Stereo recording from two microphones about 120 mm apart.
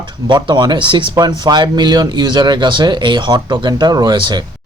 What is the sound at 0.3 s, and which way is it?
Speech, 40° right (ahead or behind).